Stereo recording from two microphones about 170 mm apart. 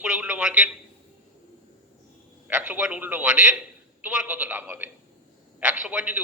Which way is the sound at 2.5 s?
10° right (ahead or behind).